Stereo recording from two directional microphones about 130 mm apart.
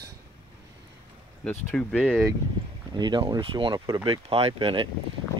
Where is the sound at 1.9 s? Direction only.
5° left (ahead or behind).